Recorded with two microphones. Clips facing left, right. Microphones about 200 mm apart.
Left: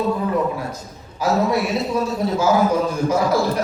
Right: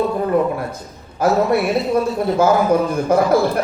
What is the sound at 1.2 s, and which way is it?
A woman's voice, 55° right (ahead or behind).